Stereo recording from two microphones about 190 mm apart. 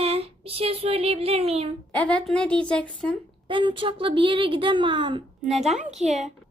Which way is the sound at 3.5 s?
25° right (ahead or behind).